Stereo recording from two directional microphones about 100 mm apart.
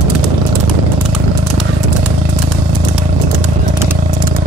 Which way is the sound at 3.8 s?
25° right (ahead or behind).